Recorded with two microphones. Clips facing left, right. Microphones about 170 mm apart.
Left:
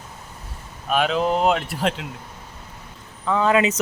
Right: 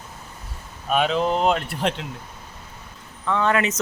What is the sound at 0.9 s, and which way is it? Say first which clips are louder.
Speech: even; centre (ahead or behind).